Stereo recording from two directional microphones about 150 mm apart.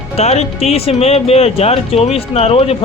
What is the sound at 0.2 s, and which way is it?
Speech, 45° left (ahead or behind).